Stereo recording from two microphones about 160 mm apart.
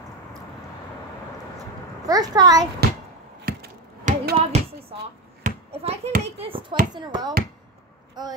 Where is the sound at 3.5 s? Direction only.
65° right (ahead or behind).